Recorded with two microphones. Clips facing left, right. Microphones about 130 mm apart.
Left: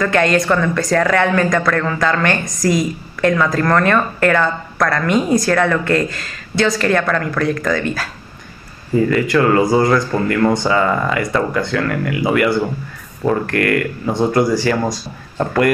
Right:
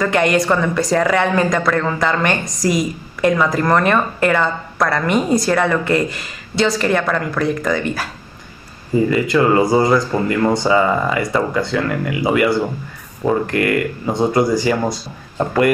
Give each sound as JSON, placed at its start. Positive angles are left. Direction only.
{"t": 0.0, "sound": "a woman's voice", "side_deg": -15}
{"t": 9.1, "sound": "speech", "side_deg": -10}